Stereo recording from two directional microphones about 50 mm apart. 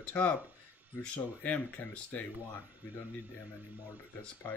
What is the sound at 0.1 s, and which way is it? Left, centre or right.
Speech, left.